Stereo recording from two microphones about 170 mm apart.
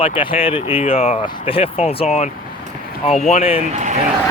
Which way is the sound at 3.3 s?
35° left (ahead or behind).